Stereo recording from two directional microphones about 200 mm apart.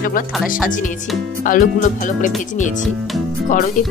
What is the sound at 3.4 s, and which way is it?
Speech, 40° left (ahead or behind).